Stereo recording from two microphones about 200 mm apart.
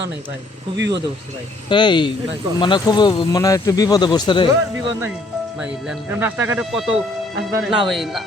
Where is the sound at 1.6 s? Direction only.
25° left (ahead or behind).